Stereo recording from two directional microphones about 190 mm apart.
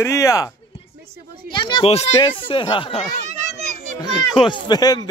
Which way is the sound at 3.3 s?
40° right (ahead or behind).